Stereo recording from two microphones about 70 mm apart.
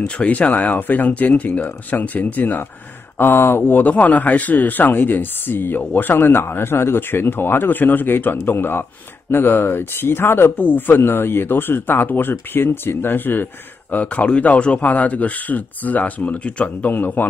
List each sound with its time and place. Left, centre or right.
0.0 s speech: centre